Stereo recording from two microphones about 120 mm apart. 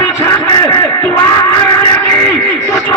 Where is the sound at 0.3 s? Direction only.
20° left (ahead or behind).